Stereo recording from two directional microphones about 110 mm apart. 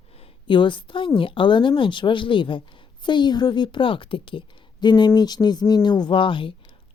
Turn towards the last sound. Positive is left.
turn(degrees=50)  # may be behind; listen again after turning